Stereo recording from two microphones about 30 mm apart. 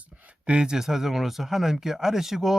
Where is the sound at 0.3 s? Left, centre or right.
Right.